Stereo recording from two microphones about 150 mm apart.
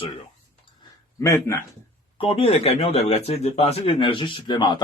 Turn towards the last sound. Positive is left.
turn(degrees=30)  # may be behind; listen again after turning